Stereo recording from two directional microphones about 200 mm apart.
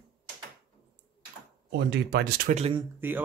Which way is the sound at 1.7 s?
60° right (ahead or behind).